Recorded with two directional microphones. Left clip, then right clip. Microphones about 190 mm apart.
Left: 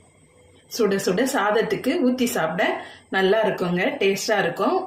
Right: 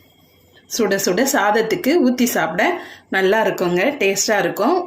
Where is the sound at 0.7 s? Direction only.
50° right (ahead or behind).